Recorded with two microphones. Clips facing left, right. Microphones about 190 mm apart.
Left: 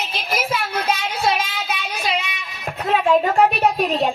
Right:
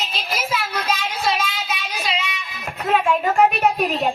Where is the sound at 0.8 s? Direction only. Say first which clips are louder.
Left 2 dB; 55° left (ahead or behind).